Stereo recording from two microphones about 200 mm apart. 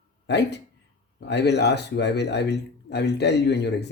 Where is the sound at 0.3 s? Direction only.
60° left (ahead or behind).